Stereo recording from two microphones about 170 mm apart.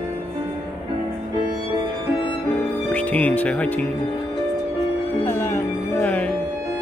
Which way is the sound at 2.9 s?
10° left (ahead or behind).